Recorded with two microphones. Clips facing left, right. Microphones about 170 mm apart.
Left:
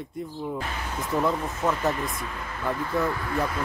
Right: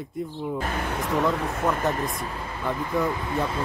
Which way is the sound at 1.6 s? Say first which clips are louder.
Even; centre (ahead or behind).